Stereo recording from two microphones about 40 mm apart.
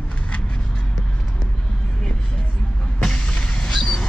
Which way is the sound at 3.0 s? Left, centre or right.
Left.